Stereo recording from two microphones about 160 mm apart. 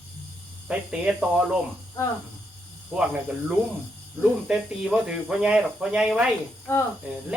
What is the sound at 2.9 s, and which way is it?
Speech, 10° right (ahead or behind).